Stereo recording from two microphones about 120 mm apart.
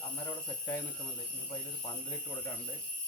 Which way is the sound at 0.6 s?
25° left (ahead or behind).